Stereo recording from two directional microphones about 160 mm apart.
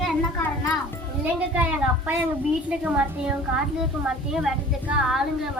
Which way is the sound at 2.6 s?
5° right (ahead or behind).